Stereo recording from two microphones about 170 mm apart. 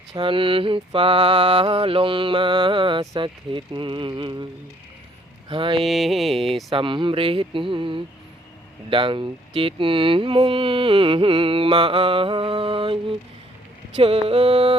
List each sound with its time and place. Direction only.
0.1 s mantra: 30° right (ahead or behind)
5.5 s mantra: 30° right (ahead or behind)
5.8 s speech: centre (ahead or behind)
6.7 s mantra: 30° right (ahead or behind)